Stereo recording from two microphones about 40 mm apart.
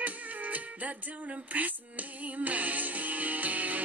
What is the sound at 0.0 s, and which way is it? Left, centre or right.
Music, right.